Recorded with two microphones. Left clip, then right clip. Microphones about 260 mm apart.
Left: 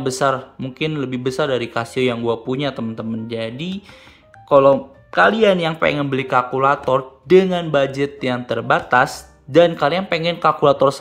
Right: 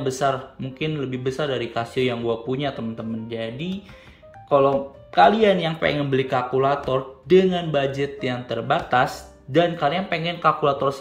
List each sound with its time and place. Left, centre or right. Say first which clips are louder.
0.0 s speech: left 4 dB; centre